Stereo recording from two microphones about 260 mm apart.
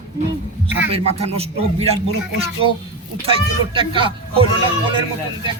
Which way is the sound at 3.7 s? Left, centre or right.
Centre.